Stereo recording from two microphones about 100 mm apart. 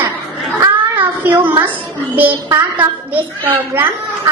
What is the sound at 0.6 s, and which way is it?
A child's voice, 20° right (ahead or behind).